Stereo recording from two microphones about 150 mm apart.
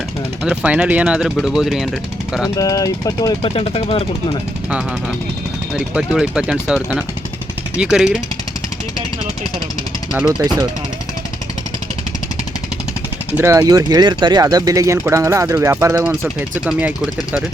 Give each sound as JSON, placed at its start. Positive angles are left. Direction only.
{"t": 0.4, "sound": "speech", "side_deg": -5}
{"t": 2.6, "sound": "speech", "side_deg": 25}
{"t": 3.4, "sound": "speech", "side_deg": 40}
{"t": 5.9, "sound": "speech", "side_deg": -5}
{"t": 7.8, "sound": "speech", "side_deg": -5}
{"t": 10.1, "sound": "speech", "side_deg": -5}
{"t": 13.3, "sound": "speech", "side_deg": -20}
{"t": 16.0, "sound": "speech", "side_deg": -10}